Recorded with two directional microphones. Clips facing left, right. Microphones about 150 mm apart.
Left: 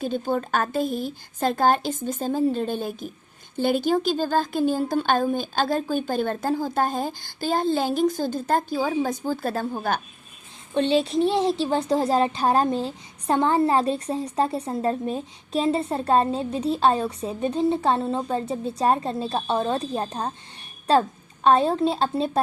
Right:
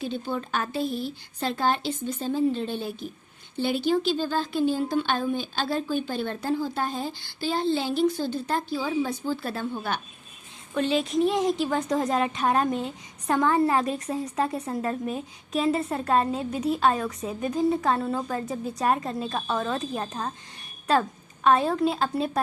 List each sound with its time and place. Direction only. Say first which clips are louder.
0.0 s speech: left 5 dB; 45° left (ahead or behind)
10.8 s a woman's voice: left 3 dB; 30° left (ahead or behind)